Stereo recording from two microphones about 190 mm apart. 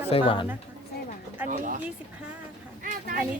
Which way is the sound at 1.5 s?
45° right (ahead or behind).